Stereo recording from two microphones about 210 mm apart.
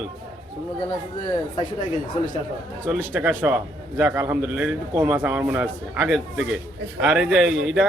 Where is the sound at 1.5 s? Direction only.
35° left (ahead or behind).